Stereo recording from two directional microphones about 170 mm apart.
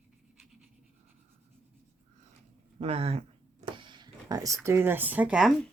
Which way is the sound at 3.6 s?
30° right (ahead or behind).